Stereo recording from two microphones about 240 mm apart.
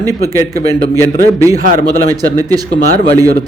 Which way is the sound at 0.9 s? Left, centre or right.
Centre.